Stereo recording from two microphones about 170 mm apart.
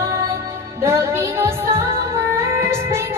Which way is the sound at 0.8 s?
15° right (ahead or behind).